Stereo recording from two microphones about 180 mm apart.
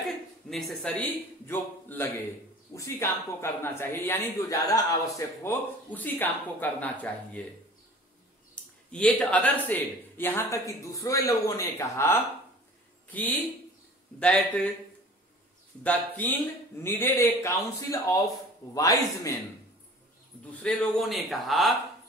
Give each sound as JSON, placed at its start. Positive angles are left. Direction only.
{"t": 0.5, "sound": "speech", "side_deg": 0}
{"t": 8.6, "sound": "a sound", "side_deg": 5}
{"t": 8.9, "sound": "speech", "side_deg": 5}
{"t": 15.8, "sound": "speech", "side_deg": 10}
{"t": 20.6, "sound": "speech", "side_deg": 0}